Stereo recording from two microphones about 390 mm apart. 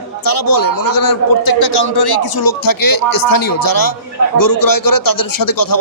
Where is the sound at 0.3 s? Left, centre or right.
Left.